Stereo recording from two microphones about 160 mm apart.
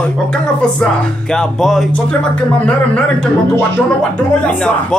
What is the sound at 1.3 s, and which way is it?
Music, 5° left (ahead or behind).